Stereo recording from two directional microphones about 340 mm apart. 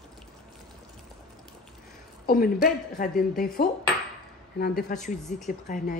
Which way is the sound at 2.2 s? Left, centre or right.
Left.